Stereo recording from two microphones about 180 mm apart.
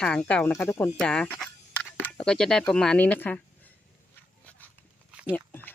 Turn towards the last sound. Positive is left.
turn(degrees=10)  # may be behind; listen again after turning